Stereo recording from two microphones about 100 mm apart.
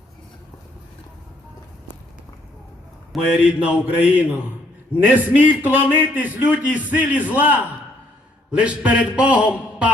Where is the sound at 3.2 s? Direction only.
10° right (ahead or behind).